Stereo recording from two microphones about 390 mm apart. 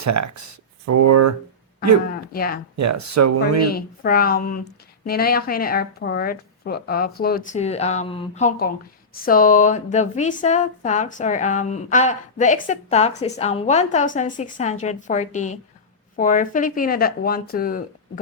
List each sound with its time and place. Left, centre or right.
0.0 s speech: right
2.3 s speech: left
2.7 s speech: right
3.7 s a woman's voice: left